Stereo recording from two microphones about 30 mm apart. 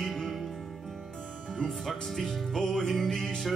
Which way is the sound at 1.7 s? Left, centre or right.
Centre.